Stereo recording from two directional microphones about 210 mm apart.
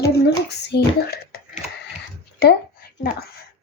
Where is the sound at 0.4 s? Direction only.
50° left (ahead or behind).